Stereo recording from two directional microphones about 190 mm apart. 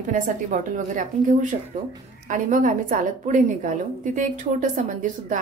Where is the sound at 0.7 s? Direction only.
45° right (ahead or behind).